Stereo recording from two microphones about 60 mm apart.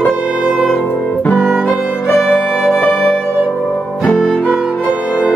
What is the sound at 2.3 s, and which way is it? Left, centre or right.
Music, centre.